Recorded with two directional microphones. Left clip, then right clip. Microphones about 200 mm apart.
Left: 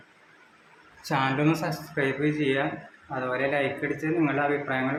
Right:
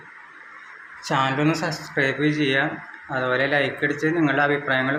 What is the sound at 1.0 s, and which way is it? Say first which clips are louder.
Speech: right 3 dB; centre (ahead or behind).